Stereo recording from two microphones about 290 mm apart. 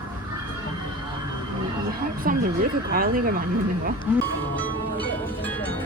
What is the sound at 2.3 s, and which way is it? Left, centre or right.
Speech, right.